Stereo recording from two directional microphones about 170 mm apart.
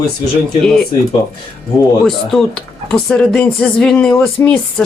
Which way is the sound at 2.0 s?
5° left (ahead or behind).